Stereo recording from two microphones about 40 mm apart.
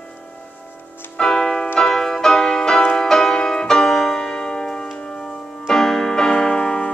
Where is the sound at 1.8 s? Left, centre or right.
Centre.